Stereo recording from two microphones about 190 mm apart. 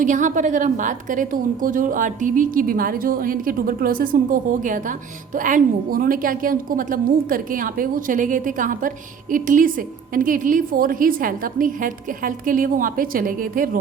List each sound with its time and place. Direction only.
0.0 s a woman's voice: 40° right (ahead or behind)